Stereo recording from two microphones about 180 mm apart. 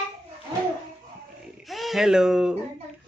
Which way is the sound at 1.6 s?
Centre (ahead or behind).